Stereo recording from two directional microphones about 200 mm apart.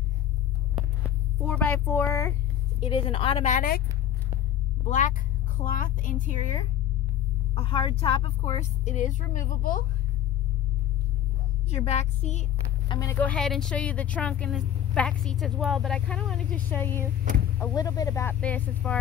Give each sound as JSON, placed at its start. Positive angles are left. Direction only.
{"t": 1.4, "sound": "speech", "side_deg": 5}
{"t": 2.8, "sound": "a woman's voice", "side_deg": 25}
{"t": 4.8, "sound": "a woman's voice", "side_deg": 40}
{"t": 7.5, "sound": "a woman's voice", "side_deg": 25}
{"t": 11.7, "sound": "a woman's voice", "side_deg": 35}
{"t": 12.8, "sound": "speech", "side_deg": 20}
{"t": 17.2, "sound": "speech", "side_deg": -40}
{"t": 17.6, "sound": "speech", "side_deg": 20}